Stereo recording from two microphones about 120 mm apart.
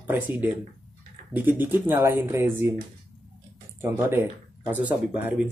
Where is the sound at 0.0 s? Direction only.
15° right (ahead or behind).